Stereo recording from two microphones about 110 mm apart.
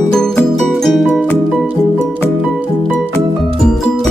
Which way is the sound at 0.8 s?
Centre (ahead or behind).